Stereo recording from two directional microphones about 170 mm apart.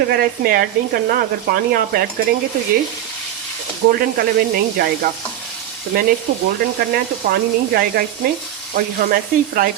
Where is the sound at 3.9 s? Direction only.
65° right (ahead or behind).